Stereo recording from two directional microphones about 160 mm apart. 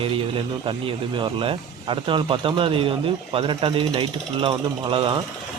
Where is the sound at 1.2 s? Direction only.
35° right (ahead or behind).